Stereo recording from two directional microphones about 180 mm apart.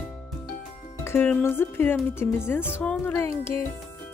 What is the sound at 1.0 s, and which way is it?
Speech, 10° left (ahead or behind).